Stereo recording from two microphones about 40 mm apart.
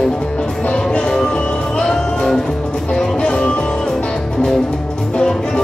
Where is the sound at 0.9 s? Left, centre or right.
Centre.